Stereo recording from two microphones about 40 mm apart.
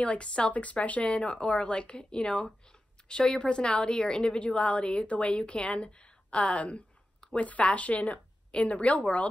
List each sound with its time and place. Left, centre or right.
0.0 s a woman's voice: left